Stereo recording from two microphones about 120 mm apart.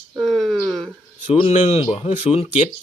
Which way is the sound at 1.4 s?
65° left (ahead or behind).